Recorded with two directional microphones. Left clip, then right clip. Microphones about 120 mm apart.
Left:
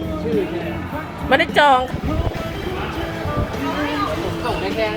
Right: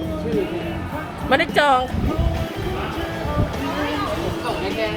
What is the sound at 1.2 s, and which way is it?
Speech, 10° right (ahead or behind).